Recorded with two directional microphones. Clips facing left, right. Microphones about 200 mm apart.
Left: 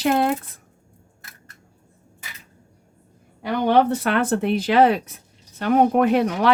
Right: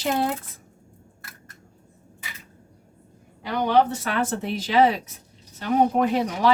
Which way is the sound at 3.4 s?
55° left (ahead or behind).